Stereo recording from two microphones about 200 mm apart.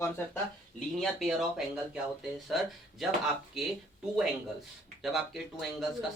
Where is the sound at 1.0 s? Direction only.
Centre (ahead or behind).